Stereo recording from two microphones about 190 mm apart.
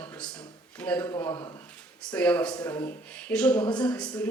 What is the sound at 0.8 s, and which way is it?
Speech, 10° left (ahead or behind).